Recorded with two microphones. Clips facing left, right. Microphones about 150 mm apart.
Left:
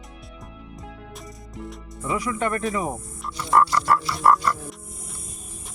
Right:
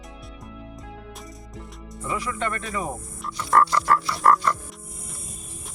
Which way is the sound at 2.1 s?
15° left (ahead or behind).